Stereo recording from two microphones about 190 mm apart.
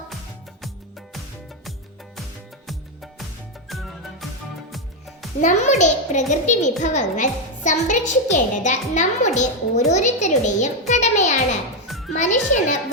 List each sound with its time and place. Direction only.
2.6 s music: centre (ahead or behind)
5.4 s a child's voice: 40° left (ahead or behind)
11.9 s music: centre (ahead or behind)
12.1 s a child's voice: 40° left (ahead or behind)